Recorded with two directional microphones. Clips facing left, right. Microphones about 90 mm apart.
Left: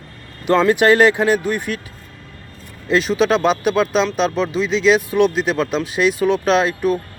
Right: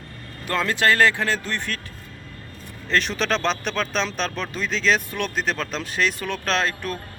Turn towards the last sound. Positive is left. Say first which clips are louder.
# left 8 dB
turn(degrees=10)  # may be behind; listen again after turning